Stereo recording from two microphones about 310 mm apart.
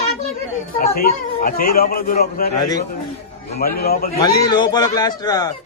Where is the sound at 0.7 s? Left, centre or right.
Left.